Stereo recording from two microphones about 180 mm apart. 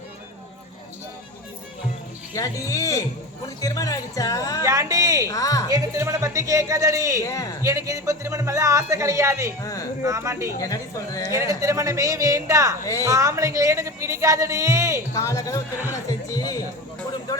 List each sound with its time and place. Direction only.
2.3 s speech: 15° left (ahead or behind)
4.6 s speech: 15° right (ahead or behind)
5.3 s speech: 20° left (ahead or behind)
5.7 s speech: 20° right (ahead or behind)
7.2 s speech: 20° left (ahead or behind)
7.6 s speech: 15° right (ahead or behind)
9.6 s speech: 20° left (ahead or behind)
10.0 s speech: 15° right (ahead or behind)
10.6 s speech: 20° left (ahead or behind)
11.3 s speech: 15° right (ahead or behind)
12.8 s speech: 20° left (ahead or behind)
13.1 s speech: 15° right (ahead or behind)
15.1 s speech: 20° left (ahead or behind)